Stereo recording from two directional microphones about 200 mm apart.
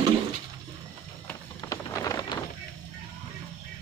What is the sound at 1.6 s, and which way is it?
Rain, 15° left (ahead or behind).